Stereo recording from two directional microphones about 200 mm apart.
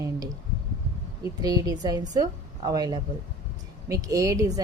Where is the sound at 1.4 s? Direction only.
20° right (ahead or behind).